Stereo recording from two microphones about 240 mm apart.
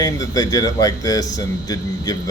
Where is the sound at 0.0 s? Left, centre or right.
Centre.